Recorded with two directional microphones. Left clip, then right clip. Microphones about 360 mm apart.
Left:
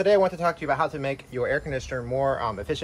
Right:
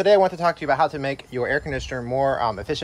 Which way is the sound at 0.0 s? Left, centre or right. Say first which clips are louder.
Right 4 dB; right.